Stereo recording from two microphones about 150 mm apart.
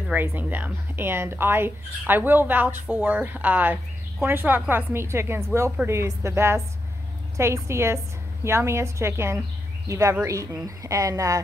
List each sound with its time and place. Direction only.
0.1 s speech: 10° right (ahead or behind)